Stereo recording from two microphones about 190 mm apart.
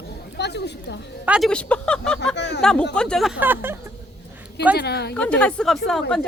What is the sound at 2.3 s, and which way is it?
Speech, 65° left (ahead or behind).